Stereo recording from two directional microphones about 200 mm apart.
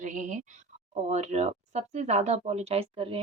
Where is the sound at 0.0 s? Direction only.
40° right (ahead or behind).